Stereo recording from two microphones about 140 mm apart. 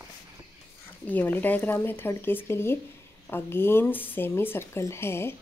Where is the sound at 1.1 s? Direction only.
15° left (ahead or behind).